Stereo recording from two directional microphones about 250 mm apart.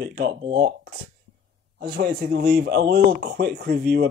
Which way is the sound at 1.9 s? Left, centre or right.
Right.